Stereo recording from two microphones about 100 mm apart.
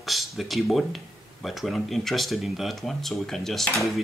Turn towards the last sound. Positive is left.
turn(degrees=5)  # may be behind; listen again after turning